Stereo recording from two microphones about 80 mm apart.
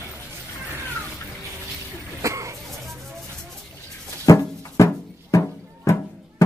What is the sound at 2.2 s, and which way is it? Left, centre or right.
Cough, right.